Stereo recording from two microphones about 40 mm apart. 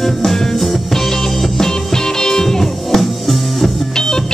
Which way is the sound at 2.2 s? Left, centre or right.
Centre.